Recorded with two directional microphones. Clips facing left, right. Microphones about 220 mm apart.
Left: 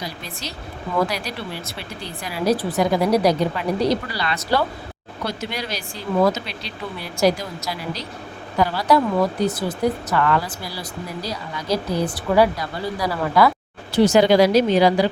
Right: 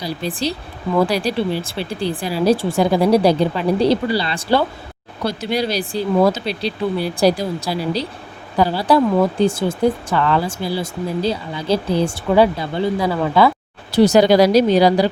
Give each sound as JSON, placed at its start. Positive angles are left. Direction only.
{"t": 0.0, "sound": "speech", "side_deg": -30}
{"t": 13.9, "sound": "speech", "side_deg": -35}